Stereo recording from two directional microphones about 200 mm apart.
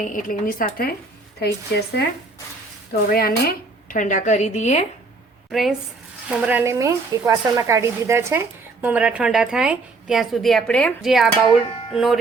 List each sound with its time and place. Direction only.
0.0 s a woman's voice: 40° left (ahead or behind)
5.5 s a woman's voice: centre (ahead or behind)